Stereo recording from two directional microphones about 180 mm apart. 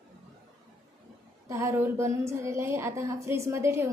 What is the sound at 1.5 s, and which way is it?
A woman's voice, 15° right (ahead or behind).